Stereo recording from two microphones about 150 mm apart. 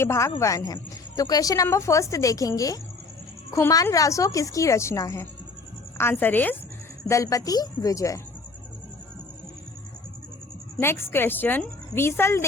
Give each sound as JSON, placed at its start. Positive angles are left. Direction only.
{"t": 0.0, "sound": "a woman's voice", "side_deg": 20}
{"t": 10.8, "sound": "a woman's voice", "side_deg": 15}